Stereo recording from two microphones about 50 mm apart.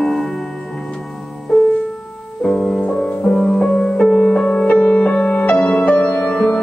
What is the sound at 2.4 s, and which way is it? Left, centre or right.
Music, centre.